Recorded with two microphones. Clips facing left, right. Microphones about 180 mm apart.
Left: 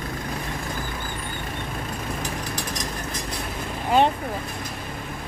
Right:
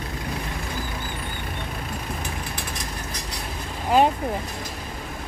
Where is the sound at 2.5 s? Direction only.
40° left (ahead or behind).